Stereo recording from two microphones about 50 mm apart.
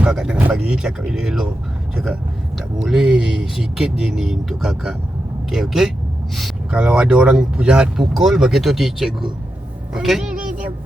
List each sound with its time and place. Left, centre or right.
0.1 s speech: centre
2.8 s speech: centre
6.7 s speech: centre
7.9 s speech: centre
9.9 s a sound: centre